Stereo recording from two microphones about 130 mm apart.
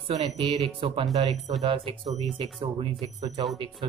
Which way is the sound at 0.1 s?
60° right (ahead or behind).